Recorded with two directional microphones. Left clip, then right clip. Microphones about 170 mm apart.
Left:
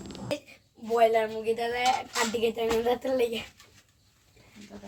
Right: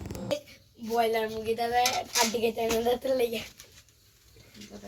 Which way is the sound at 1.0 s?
60° left (ahead or behind).